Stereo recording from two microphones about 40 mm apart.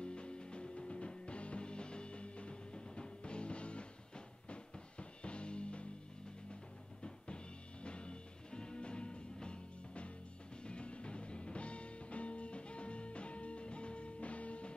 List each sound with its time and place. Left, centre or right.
0.0 s music: left